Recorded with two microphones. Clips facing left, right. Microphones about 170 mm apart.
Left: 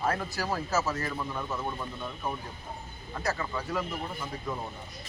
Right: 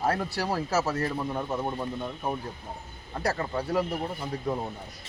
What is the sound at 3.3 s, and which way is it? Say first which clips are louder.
Speech: right 4 dB; 40° right (ahead or behind).